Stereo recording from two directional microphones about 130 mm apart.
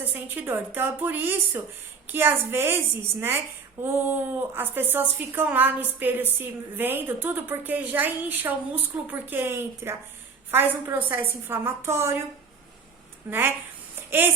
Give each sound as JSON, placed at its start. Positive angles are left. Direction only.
{"t": 0.0, "sound": "a woman's voice", "side_deg": -15}
{"t": 14.1, "sound": "a woman's voice", "side_deg": -15}